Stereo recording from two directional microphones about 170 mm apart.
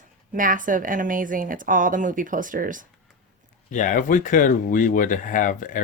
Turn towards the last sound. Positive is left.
turn(degrees=50)  # may be behind; listen again after turning